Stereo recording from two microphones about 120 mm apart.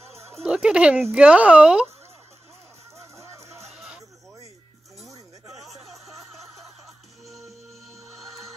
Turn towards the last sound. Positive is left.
turn(degrees=0)  # may be behind; listen again after turning